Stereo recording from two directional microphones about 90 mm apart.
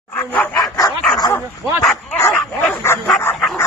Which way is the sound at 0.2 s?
15° left (ahead or behind).